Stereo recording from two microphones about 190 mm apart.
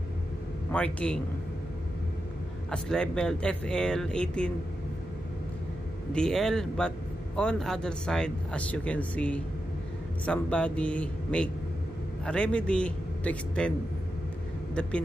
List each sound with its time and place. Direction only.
0.7 s a man's voice: 5° left (ahead or behind)
2.7 s speech: 5° left (ahead or behind)
6.1 s speech: 5° left (ahead or behind)